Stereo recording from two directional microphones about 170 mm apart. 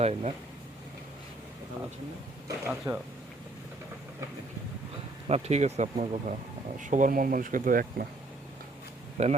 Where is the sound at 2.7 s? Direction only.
10° right (ahead or behind).